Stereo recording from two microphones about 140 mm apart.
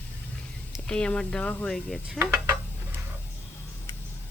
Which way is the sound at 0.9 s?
5° left (ahead or behind).